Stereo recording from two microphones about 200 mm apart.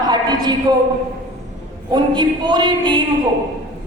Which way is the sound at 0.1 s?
20° right (ahead or behind).